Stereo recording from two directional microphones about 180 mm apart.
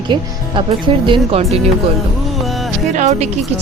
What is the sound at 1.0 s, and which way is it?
Speech, 30° right (ahead or behind).